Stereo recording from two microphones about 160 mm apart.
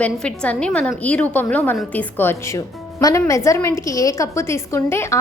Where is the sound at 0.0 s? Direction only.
5° left (ahead or behind).